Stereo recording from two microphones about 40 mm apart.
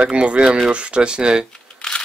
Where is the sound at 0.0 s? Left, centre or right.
Right.